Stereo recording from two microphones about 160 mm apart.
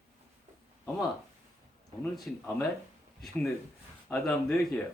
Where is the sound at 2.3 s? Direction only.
5° left (ahead or behind).